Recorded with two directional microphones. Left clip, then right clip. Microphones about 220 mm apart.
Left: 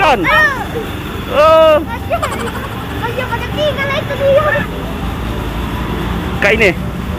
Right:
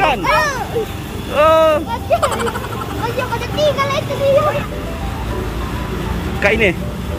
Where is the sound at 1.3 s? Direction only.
15° right (ahead or behind).